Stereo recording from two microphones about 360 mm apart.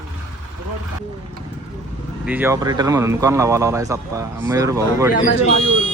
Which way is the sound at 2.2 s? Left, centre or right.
Centre.